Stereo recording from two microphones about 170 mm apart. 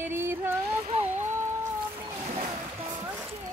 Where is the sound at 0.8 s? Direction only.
40° right (ahead or behind).